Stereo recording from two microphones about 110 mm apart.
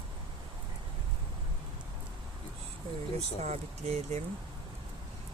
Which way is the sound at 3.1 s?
75° right (ahead or behind).